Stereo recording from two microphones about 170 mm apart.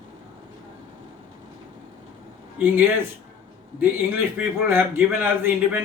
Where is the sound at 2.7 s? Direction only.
15° right (ahead or behind).